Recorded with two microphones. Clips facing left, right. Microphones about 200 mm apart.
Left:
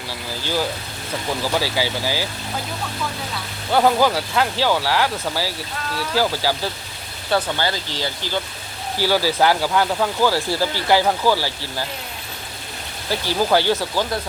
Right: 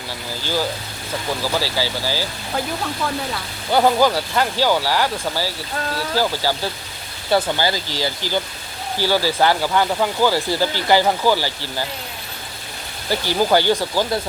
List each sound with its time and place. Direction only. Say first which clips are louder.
1.5 s speech: left 1 dB; 15° left (ahead or behind)
3.7 s speech: right 1 dB; centre (ahead or behind)
7.3 s speech: right 2 dB; 10° right (ahead or behind)
9.0 s speech: even; 10° left (ahead or behind)
13.1 s speech: right 1 dB; centre (ahead or behind)